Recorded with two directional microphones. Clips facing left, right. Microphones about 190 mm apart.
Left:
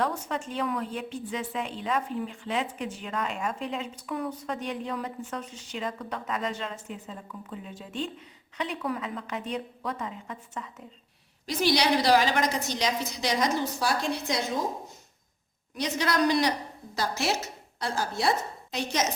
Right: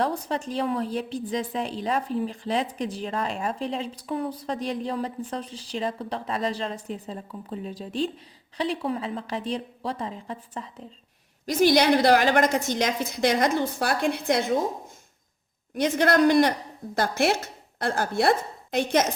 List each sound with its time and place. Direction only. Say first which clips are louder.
0.0 s a woman's voice: right 3 dB; 35° right (ahead or behind)
11.4 s a woman's voice: right 6 dB; 50° right (ahead or behind)
15.7 s a woman's voice: right 7 dB; 55° right (ahead or behind)